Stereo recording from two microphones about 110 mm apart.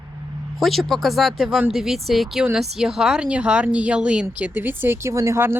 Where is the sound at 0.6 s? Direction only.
Centre (ahead or behind).